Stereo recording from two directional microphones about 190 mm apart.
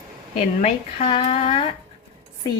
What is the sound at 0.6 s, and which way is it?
A woman's voice, 30° left (ahead or behind).